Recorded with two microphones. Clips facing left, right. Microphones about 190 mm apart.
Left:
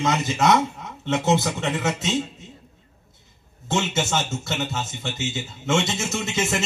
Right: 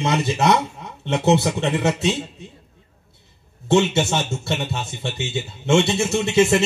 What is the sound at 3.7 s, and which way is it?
Speech, 30° right (ahead or behind).